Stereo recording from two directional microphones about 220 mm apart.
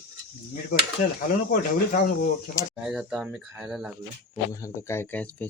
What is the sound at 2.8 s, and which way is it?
Speech, 5° right (ahead or behind).